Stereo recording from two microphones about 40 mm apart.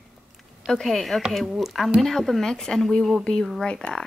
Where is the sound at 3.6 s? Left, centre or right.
Left.